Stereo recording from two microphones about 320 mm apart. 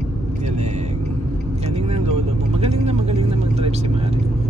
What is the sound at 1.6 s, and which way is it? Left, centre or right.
Vehicle, centre.